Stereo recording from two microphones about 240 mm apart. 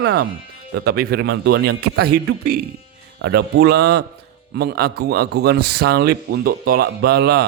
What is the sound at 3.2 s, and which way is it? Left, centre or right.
A man's voice, right.